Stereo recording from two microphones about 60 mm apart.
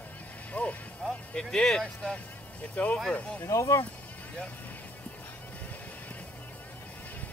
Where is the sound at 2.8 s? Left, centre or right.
Left.